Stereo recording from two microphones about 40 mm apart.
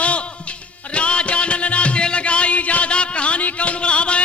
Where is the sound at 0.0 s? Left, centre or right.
Left.